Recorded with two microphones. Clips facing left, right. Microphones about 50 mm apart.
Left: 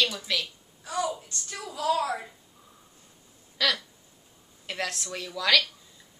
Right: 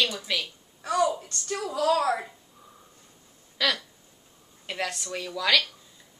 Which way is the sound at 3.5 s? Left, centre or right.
Centre.